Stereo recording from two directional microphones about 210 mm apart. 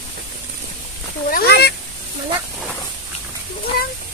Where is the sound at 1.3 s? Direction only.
50° left (ahead or behind).